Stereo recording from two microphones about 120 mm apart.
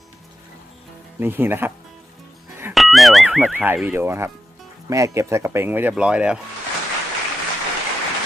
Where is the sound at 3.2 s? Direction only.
10° right (ahead or behind).